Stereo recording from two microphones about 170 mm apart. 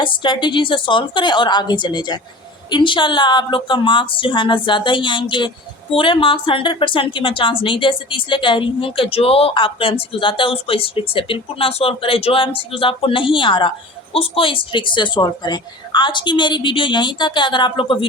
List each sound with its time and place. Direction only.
0.0 s a woman's voice: 30° left (ahead or behind)